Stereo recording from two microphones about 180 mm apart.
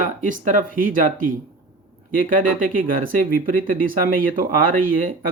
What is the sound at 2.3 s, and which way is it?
Speech, 50° right (ahead or behind).